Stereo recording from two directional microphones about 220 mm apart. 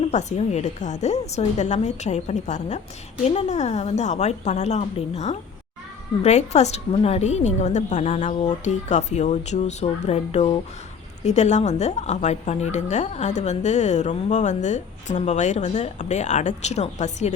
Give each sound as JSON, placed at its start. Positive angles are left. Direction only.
{"t": 0.1, "sound": "a woman's voice", "side_deg": 30}